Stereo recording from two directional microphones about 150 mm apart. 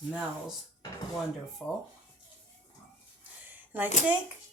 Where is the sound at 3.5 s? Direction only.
10° right (ahead or behind).